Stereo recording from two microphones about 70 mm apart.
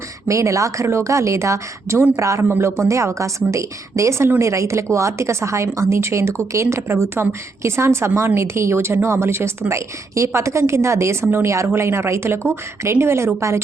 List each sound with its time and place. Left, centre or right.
0.3 s speech: right
2.4 s a woman's voice: right